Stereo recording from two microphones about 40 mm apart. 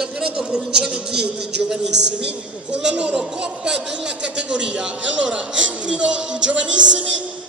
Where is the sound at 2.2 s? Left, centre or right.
Right.